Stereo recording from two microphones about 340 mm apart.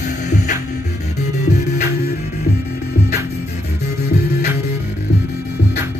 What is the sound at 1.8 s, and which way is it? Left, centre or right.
Music, left.